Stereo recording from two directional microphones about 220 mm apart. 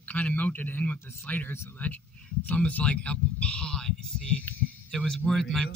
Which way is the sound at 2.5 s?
5° left (ahead or behind).